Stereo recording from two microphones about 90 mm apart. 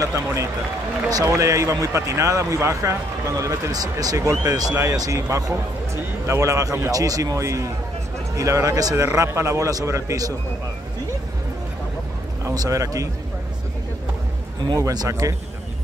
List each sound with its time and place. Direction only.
0.0 s a man's voice: 35° right (ahead or behind)
12.4 s a man's voice: 35° right (ahead or behind)
14.7 s a man's voice: 45° right (ahead or behind)